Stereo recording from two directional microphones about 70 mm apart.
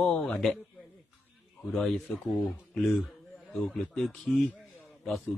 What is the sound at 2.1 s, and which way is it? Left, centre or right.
Speech, centre.